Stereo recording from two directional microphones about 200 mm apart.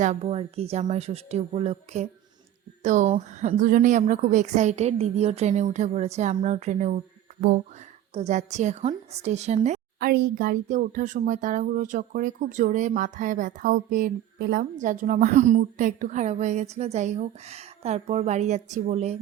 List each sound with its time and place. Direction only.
0.0 s speech: 35° right (ahead or behind)
8.1 s speech: 35° right (ahead or behind)
10.1 s speech: 45° right (ahead or behind)